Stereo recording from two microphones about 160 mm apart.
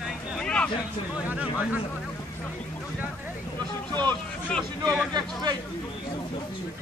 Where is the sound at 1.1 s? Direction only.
10° right (ahead or behind).